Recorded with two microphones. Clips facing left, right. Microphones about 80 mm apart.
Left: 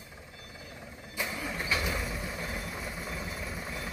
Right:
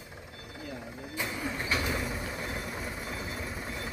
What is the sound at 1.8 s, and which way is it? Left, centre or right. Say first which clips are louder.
Vehicle: right 1 dB; centre.